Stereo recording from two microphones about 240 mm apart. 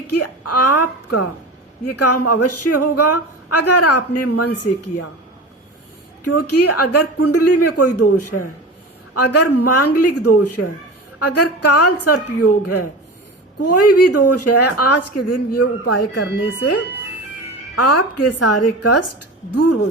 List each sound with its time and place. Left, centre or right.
0.1 s speech: left
6.2 s a woman's voice: left
16.1 s speech: left
17.7 s a woman's voice: left